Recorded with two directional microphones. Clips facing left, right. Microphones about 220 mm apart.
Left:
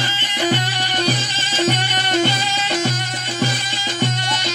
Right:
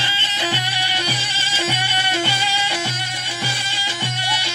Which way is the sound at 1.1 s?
10° right (ahead or behind).